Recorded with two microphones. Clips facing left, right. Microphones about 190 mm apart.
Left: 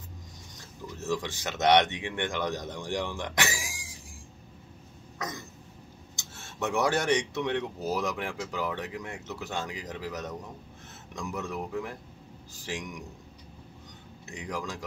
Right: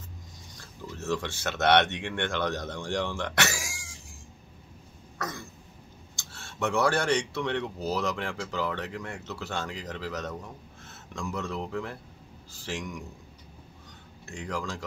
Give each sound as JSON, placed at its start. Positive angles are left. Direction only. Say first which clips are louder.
{"t": 0.6, "sound": "speech", "louder": "right 1 dB", "side_deg": 15}
{"t": 5.2, "sound": "cough", "louder": "right 1 dB", "side_deg": 20}
{"t": 6.1, "sound": "speech", "louder": "even", "side_deg": 20}
{"t": 14.2, "sound": "speech", "louder": "right 1 dB", "side_deg": 15}